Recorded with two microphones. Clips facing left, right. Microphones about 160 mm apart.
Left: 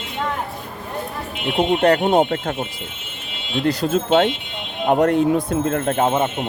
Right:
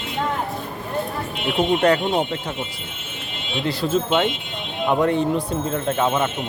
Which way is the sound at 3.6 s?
45° left (ahead or behind).